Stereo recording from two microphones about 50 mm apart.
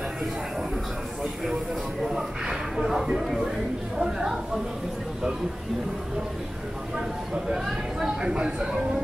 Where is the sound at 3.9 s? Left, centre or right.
Centre.